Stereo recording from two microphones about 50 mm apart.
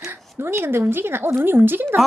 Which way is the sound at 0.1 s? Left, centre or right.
Right.